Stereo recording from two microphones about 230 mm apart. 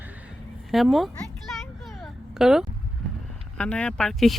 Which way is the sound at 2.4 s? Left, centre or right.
Centre.